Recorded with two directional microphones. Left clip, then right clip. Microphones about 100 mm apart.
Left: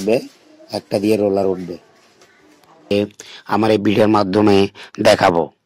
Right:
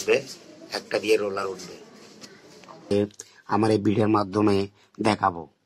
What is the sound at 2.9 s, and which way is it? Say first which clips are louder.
Speech: left 6 dB; 50° left (ahead or behind).